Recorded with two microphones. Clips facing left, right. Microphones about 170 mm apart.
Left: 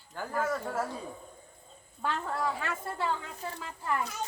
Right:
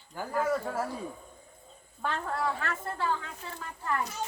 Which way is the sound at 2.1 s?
10° left (ahead or behind).